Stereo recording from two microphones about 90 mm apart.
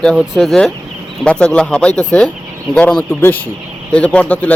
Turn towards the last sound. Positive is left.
turn(degrees=15)  # may be behind; listen again after turning